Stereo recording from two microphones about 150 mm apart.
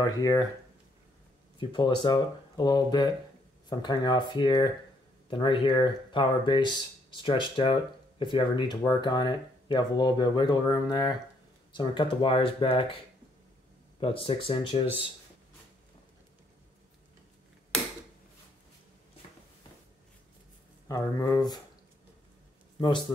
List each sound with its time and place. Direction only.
0.0 s speech: 25° left (ahead or behind)
1.6 s speech: 30° left (ahead or behind)
20.9 s speech: 25° left (ahead or behind)
22.8 s speech: 30° left (ahead or behind)